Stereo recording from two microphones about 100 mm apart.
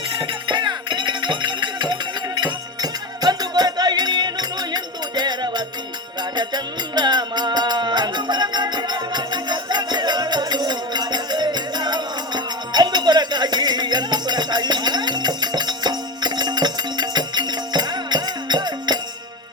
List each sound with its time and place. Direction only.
0.2 s music: 50° right (ahead or behind)